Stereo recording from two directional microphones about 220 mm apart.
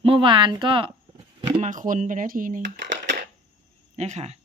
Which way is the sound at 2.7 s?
55° right (ahead or behind).